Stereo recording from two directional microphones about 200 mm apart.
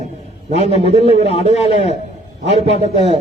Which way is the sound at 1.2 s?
30° left (ahead or behind).